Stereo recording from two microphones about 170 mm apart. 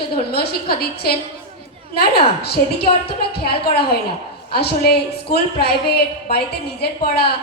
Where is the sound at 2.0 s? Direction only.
70° left (ahead or behind).